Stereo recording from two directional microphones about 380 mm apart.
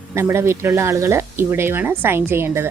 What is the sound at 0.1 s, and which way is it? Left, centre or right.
Speech, centre.